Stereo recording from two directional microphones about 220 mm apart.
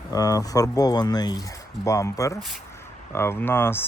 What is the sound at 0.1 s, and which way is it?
Speech, 15° left (ahead or behind).